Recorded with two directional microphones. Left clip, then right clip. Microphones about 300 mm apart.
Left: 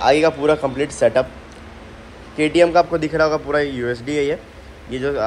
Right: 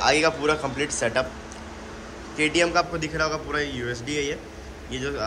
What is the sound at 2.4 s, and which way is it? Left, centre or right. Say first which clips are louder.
A man's voice: left 7 dB; centre.